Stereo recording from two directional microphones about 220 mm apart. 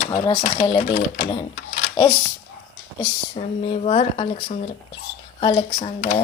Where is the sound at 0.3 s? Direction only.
30° left (ahead or behind).